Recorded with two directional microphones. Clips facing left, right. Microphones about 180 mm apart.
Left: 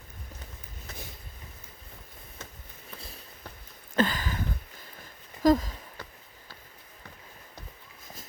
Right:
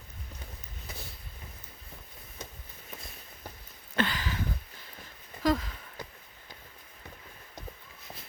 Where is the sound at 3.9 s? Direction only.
45° left (ahead or behind).